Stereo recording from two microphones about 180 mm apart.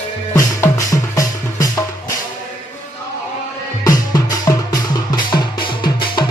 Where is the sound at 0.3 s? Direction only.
15° left (ahead or behind).